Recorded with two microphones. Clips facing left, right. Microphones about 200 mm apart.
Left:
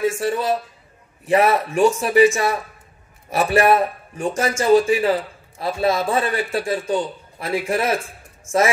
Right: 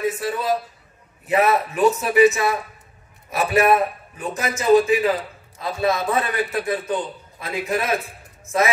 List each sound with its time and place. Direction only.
0.0 s a man's voice: 25° left (ahead or behind)